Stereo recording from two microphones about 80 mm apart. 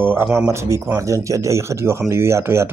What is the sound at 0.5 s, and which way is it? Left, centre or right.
Speech, right.